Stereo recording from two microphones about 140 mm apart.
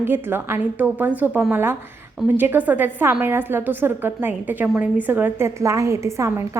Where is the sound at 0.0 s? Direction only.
15° right (ahead or behind).